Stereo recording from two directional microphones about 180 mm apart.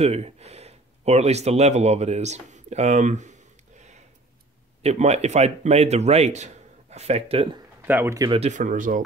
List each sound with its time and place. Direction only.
0.0 s a man's voice: 35° right (ahead or behind)
7.8 s speech: 10° right (ahead or behind)
8.3 s speech: 40° right (ahead or behind)